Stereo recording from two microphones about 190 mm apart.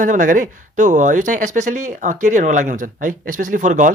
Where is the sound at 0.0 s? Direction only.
45° right (ahead or behind).